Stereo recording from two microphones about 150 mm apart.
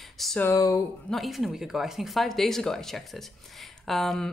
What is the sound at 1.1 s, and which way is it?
Speech, centre (ahead or behind).